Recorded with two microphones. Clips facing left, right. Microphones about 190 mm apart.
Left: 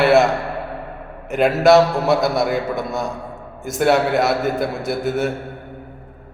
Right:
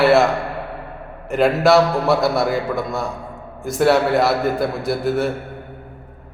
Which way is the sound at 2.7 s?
20° left (ahead or behind).